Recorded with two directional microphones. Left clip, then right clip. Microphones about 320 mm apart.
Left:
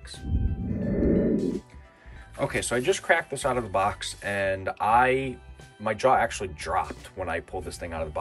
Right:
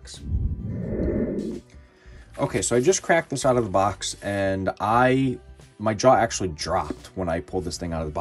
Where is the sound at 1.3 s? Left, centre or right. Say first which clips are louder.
Left 3 dB; centre.